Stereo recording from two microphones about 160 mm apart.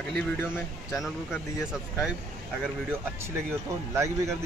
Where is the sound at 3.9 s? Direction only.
20° right (ahead or behind).